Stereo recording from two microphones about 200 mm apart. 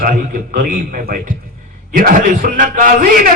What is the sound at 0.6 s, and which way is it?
A man's voice, 45° right (ahead or behind).